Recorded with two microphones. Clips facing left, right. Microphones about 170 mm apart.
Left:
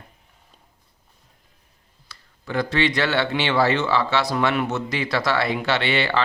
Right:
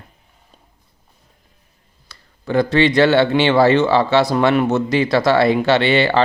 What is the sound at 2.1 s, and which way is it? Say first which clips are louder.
Speech: right 8 dB; 30° right (ahead or behind).